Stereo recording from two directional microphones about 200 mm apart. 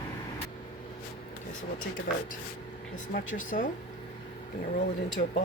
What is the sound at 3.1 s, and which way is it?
Speech, 40° left (ahead or behind).